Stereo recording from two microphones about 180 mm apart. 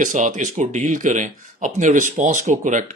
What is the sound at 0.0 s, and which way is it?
Speech, 45° right (ahead or behind).